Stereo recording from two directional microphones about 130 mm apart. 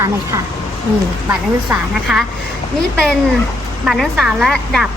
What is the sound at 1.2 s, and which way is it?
Speech, 5° right (ahead or behind).